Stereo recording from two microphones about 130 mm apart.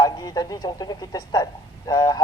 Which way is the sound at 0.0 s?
30° left (ahead or behind).